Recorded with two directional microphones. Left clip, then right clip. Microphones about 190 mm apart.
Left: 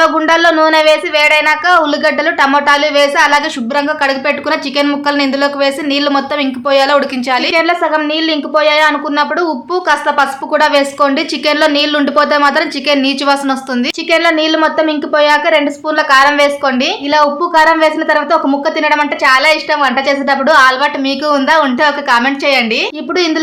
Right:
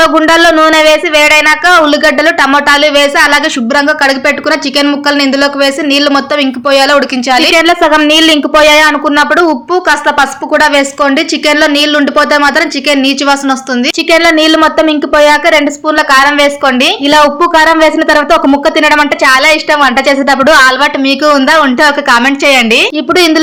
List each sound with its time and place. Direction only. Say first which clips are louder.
0.0 s speech: right 4 dB; 25° right (ahead or behind)